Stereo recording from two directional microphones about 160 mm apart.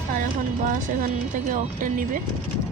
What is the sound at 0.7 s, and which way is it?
Speech, 55° right (ahead or behind).